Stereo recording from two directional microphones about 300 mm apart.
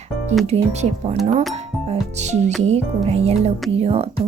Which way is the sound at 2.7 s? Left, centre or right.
Right.